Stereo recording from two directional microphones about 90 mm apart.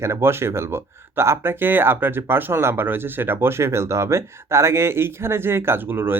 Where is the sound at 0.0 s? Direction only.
30° right (ahead or behind).